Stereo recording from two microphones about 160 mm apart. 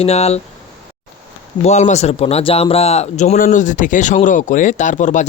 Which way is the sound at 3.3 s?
55° left (ahead or behind).